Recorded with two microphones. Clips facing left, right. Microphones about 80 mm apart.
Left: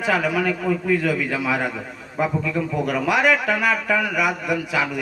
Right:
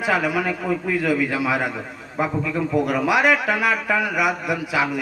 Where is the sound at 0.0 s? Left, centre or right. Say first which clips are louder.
Even; centre.